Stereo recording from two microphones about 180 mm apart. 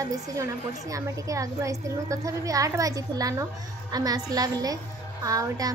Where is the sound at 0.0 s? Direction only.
20° right (ahead or behind).